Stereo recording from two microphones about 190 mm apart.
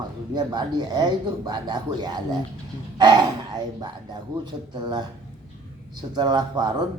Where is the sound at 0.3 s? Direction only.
20° right (ahead or behind).